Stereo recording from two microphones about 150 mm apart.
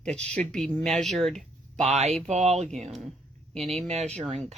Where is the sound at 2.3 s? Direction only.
45° right (ahead or behind).